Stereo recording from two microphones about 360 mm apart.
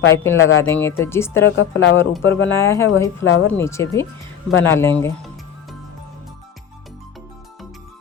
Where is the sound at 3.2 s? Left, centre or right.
Left.